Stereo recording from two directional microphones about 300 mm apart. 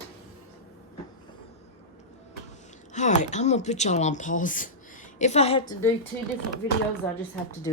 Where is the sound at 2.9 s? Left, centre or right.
Left.